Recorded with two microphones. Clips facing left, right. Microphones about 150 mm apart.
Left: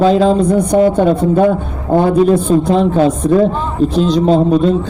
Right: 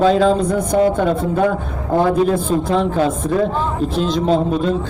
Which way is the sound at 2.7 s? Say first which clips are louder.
Left 3 dB; 35° left (ahead or behind).